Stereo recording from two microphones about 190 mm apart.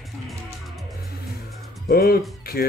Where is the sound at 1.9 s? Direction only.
50° left (ahead or behind).